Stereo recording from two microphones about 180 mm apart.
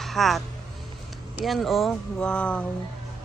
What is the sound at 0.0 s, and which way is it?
A man's voice, centre (ahead or behind).